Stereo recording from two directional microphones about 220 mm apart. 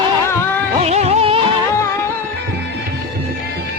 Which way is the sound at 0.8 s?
30° right (ahead or behind).